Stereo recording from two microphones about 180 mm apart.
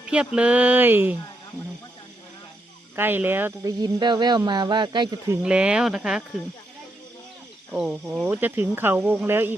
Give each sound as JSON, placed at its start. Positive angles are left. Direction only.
{"t": 0.0, "sound": "a sound", "side_deg": -5}
{"t": 0.3, "sound": "speech", "side_deg": -5}
{"t": 2.9, "sound": "speech", "side_deg": -10}
{"t": 5.4, "sound": "speech", "side_deg": -5}
{"t": 7.7, "sound": "speech", "side_deg": -5}